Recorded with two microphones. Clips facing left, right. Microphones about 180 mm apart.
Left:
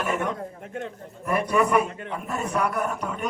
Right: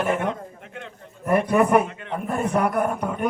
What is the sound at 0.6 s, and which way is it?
Speech, 40° left (ahead or behind).